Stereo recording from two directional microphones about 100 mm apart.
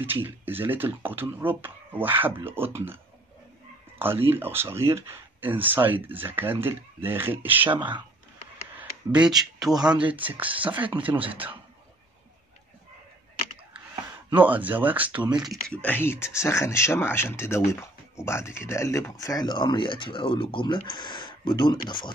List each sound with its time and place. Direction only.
0.0 s speech: 20° right (ahead or behind)
4.0 s speech: 20° right (ahead or behind)
7.7 s speech: 50° right (ahead or behind)
8.7 s speech: 10° right (ahead or behind)
10.0 s speech: 15° right (ahead or behind)
14.3 s speech: 15° right (ahead or behind)
15.8 s speech: 20° left (ahead or behind); by 22.1 s 50° left (ahead or behind)